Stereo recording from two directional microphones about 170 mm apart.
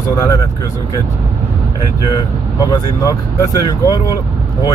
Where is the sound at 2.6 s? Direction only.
20° left (ahead or behind).